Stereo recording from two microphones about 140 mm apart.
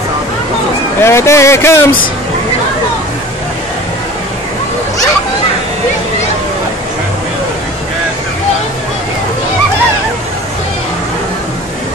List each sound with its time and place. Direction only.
1.0 s speech: 20° left (ahead or behind)